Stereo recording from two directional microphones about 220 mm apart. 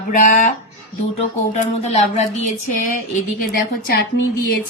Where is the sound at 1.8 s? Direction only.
30° left (ahead or behind).